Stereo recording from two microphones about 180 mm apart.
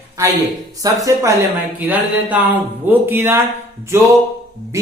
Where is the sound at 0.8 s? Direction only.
20° right (ahead or behind).